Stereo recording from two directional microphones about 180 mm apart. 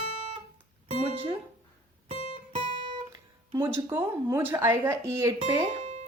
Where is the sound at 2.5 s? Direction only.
30° right (ahead or behind).